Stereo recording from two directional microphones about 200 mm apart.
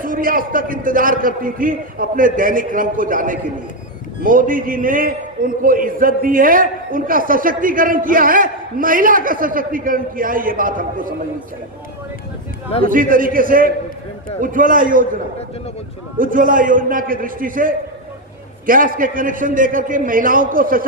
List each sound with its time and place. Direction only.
0.0 s a man's voice: 45° right (ahead or behind)
12.8 s a man's voice: 45° right (ahead or behind)